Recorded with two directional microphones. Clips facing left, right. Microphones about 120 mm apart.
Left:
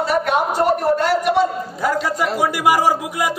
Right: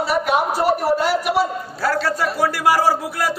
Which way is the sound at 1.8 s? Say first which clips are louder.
Even; 15° left (ahead or behind).